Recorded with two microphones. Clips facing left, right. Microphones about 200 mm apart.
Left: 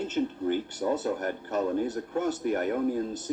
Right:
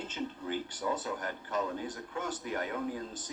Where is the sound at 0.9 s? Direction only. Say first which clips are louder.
Left 7 dB; 60° left (ahead or behind).